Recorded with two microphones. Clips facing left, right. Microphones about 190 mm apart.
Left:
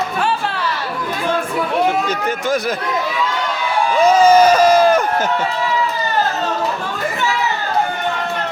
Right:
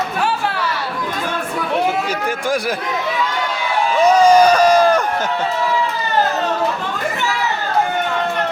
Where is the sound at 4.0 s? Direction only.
5° left (ahead or behind).